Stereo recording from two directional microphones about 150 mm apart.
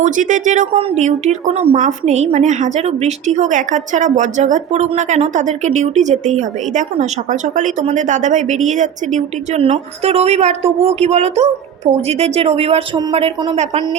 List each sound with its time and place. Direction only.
0.0 s speech: 60° right (ahead or behind)
0.8 s a woman's voice: 45° right (ahead or behind)